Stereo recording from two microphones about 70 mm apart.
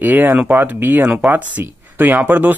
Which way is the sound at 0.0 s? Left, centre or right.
Right.